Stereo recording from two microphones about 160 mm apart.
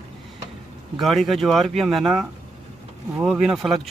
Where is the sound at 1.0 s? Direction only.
Centre (ahead or behind).